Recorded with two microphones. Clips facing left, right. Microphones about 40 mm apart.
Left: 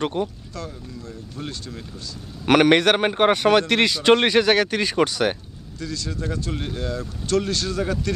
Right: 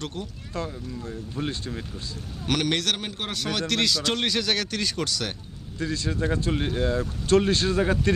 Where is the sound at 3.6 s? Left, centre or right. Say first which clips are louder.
Left 6 dB; left.